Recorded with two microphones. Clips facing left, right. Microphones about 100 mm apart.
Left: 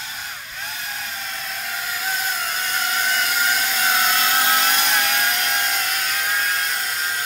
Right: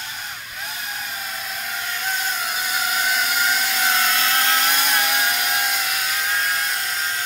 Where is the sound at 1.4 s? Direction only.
Centre (ahead or behind).